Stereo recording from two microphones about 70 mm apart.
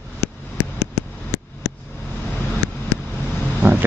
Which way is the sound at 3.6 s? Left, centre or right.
Right.